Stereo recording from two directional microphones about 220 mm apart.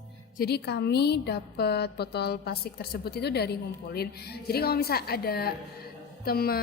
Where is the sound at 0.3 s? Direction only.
45° left (ahead or behind).